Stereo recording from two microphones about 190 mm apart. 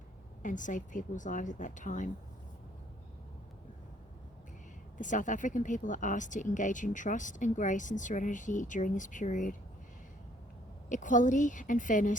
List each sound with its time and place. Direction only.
0.4 s speech: 40° left (ahead or behind)
4.9 s speech: 40° left (ahead or behind)
10.8 s a woman's voice: 40° left (ahead or behind)